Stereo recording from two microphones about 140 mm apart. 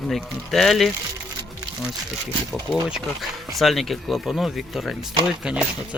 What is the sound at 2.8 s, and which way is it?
Speech, 5° right (ahead or behind).